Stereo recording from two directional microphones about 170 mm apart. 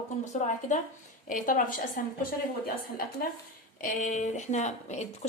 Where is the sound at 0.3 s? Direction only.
45° left (ahead or behind).